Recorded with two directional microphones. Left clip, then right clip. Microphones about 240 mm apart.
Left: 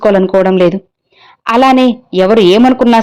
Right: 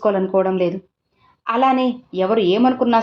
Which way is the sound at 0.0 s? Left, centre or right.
Left.